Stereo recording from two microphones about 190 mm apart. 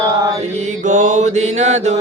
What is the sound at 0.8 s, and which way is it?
Mantra, 40° right (ahead or behind).